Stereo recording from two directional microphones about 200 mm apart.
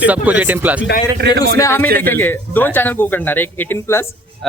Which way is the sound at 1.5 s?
15° left (ahead or behind).